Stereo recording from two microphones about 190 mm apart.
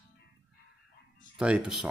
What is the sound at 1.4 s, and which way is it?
Speech, 5° right (ahead or behind).